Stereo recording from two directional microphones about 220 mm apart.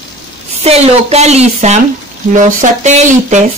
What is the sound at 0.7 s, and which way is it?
A man's voice, 30° right (ahead or behind).